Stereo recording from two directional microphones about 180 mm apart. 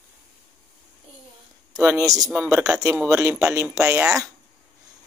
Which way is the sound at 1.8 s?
15° right (ahead or behind).